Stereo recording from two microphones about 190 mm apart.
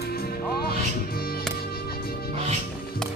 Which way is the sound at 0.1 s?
55° left (ahead or behind).